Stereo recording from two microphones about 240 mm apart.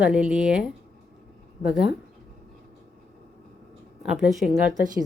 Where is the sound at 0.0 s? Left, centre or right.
Centre.